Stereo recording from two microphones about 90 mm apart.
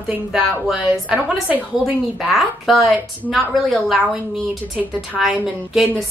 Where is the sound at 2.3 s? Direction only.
Centre (ahead or behind).